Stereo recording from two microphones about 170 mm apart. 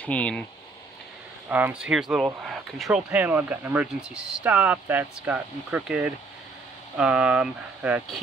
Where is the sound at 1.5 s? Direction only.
10° right (ahead or behind).